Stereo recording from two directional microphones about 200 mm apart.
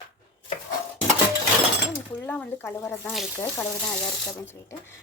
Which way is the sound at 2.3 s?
10° left (ahead or behind).